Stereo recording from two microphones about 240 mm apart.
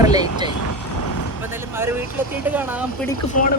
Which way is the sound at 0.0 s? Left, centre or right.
Centre.